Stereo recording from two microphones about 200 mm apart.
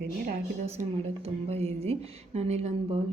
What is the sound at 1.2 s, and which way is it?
A woman's voice, 30° right (ahead or behind).